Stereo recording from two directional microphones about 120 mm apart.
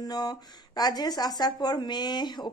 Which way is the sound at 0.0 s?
35° left (ahead or behind).